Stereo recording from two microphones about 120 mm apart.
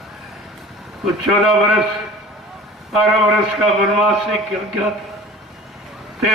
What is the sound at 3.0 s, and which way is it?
A man's voice, centre (ahead or behind).